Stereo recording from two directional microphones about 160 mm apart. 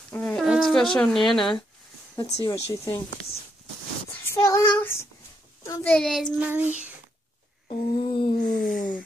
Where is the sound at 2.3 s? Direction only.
20° left (ahead or behind).